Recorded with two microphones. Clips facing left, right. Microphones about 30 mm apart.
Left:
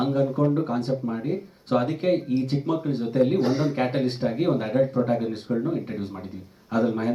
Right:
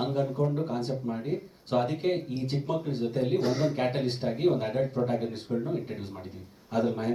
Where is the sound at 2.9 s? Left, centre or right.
Left.